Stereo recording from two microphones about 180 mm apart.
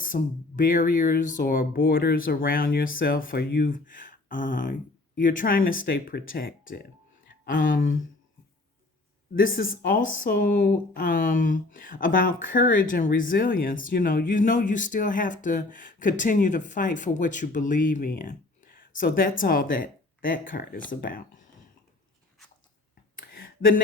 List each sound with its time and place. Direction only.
0.0 s speech: 50° left (ahead or behind); by 3.7 s 65° left (ahead or behind)
3.7 s speech: 45° left (ahead or behind)
9.8 s speech: 50° left (ahead or behind)